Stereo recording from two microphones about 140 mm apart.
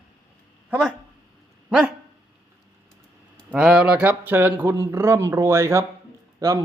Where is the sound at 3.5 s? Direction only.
5° right (ahead or behind).